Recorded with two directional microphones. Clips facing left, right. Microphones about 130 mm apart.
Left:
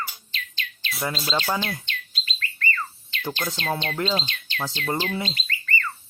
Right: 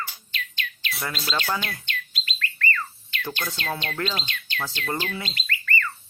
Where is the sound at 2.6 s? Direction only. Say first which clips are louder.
Even; 25° left (ahead or behind).